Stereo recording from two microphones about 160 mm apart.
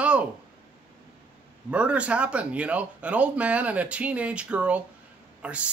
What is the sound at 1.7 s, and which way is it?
Speech, 10° right (ahead or behind).